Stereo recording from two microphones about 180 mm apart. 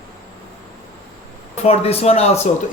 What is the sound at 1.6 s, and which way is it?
Speech, 35° left (ahead or behind).